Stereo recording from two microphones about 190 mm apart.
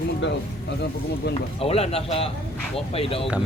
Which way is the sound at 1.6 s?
30° left (ahead or behind).